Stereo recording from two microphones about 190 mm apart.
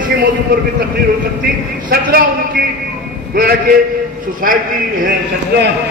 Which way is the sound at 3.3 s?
55° right (ahead or behind).